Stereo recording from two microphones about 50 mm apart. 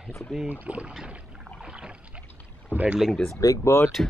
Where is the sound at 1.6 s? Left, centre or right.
Centre.